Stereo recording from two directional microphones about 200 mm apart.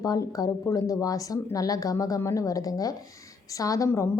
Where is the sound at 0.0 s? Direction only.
20° left (ahead or behind).